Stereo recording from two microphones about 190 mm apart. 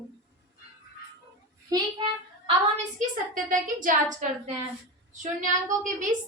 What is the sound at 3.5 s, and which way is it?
Speech, 45° right (ahead or behind).